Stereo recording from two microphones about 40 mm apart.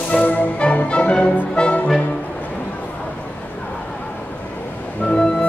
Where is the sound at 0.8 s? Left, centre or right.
Left.